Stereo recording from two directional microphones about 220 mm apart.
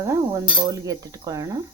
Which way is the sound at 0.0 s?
15° right (ahead or behind).